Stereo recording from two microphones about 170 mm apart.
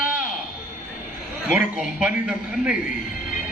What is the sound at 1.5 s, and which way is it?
A man's voice, 10° right (ahead or behind).